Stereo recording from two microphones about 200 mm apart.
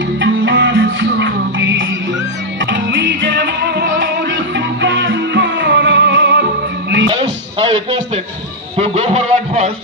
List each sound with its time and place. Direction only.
0.2 s music: 65° right (ahead or behind)
7.1 s music: 25° right (ahead or behind)
8.7 s a sound: 30° right (ahead or behind)